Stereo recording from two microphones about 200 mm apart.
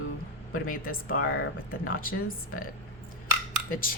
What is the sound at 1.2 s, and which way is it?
Speech, 90° left.